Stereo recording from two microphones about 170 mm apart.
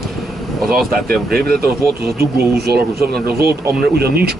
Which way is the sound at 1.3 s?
65° right (ahead or behind).